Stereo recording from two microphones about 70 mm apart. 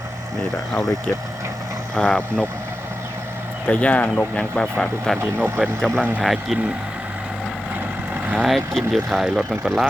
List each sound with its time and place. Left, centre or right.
0.7 s speech: centre
2.0 s speech: centre
3.7 s speech: centre
8.4 s speech: centre